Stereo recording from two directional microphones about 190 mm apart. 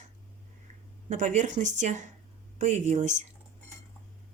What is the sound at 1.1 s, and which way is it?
Speech, 40° right (ahead or behind).